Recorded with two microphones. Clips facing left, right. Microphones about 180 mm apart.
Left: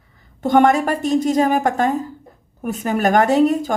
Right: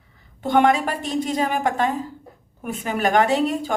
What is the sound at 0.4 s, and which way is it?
Speech, 45° left (ahead or behind).